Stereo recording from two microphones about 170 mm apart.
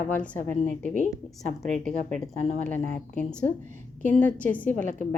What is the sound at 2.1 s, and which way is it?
Speech, 45° right (ahead or behind).